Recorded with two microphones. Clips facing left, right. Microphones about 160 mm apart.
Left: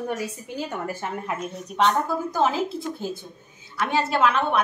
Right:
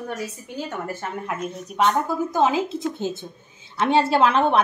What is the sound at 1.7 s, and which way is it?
Speech, 10° right (ahead or behind).